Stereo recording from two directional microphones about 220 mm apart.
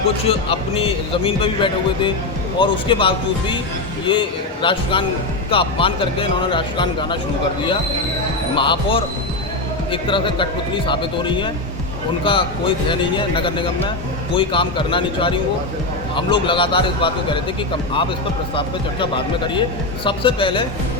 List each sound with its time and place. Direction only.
0.3 s speech: 25° left (ahead or behind)
8.5 s speech: 20° left (ahead or behind)
18.5 s speech: 25° left (ahead or behind)